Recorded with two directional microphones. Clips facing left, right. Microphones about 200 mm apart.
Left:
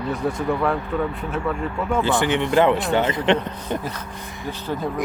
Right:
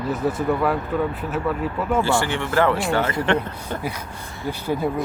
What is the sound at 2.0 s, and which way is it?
Speech, 20° left (ahead or behind).